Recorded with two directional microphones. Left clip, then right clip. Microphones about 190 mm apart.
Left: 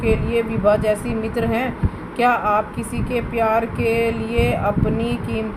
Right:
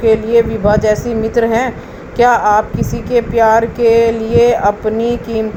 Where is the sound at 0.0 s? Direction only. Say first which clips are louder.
Right 9 dB; 30° right (ahead or behind).